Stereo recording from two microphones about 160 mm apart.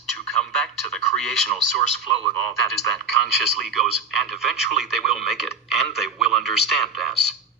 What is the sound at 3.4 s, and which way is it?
Speech, centre (ahead or behind).